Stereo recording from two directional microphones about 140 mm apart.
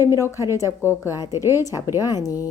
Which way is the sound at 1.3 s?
20° right (ahead or behind).